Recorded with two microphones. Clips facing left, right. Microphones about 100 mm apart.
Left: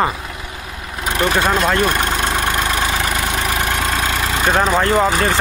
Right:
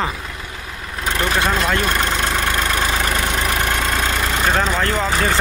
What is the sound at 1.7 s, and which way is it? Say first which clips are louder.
Vehicle: left 2 dB; 15° left (ahead or behind).